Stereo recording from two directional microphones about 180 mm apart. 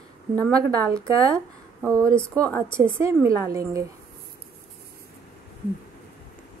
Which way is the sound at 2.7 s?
15° right (ahead or behind).